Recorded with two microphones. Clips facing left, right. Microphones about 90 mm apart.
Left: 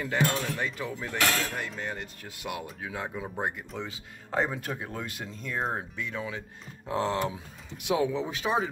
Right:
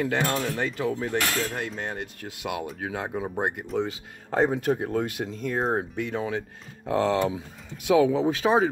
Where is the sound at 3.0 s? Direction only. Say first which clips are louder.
Right 5 dB; 35° right (ahead or behind).